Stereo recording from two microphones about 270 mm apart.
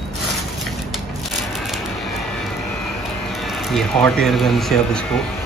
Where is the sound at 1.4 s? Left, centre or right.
Centre.